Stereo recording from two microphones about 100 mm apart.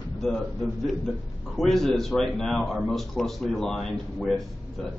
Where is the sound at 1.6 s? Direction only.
Centre (ahead or behind).